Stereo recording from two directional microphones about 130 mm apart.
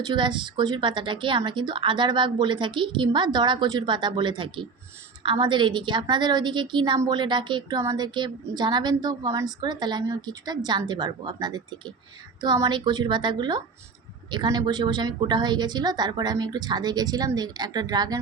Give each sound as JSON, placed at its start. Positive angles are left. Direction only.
{"t": 0.0, "sound": "a woman's voice", "side_deg": -35}